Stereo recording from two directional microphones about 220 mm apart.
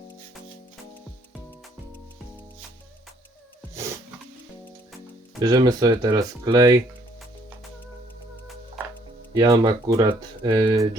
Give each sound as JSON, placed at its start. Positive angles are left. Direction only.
{"t": 5.4, "sound": "speech", "side_deg": -20}
{"t": 9.3, "sound": "speech", "side_deg": -20}